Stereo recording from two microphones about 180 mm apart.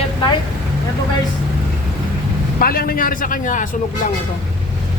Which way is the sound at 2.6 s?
55° left (ahead or behind).